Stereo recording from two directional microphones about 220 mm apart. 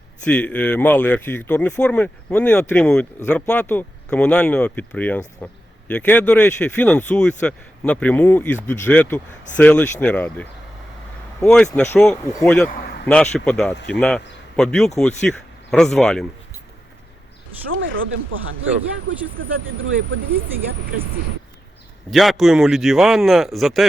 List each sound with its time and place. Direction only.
0.3 s a man's voice: 5° left (ahead or behind)
17.7 s speech: 60° right (ahead or behind)
22.1 s a man's voice: centre (ahead or behind)